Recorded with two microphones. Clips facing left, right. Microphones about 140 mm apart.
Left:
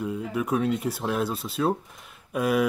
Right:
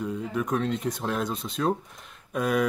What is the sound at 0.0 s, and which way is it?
Speech, 5° left (ahead or behind).